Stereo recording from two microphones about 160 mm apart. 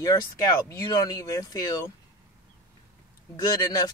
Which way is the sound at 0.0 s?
20° left (ahead or behind).